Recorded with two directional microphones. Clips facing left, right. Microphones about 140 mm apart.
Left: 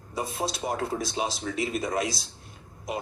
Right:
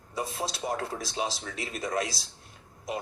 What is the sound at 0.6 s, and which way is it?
Speech, 15° left (ahead or behind).